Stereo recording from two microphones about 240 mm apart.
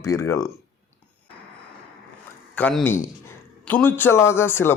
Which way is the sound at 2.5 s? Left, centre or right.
Centre.